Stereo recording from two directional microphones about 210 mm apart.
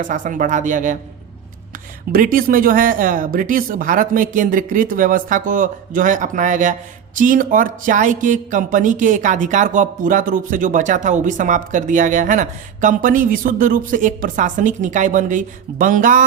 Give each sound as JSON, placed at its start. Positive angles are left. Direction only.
{"t": 0.0, "sound": "speech", "side_deg": -40}
{"t": 2.1, "sound": "speech", "side_deg": -40}